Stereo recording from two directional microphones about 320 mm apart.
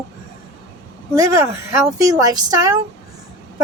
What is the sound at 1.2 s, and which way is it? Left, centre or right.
A woman's voice, centre.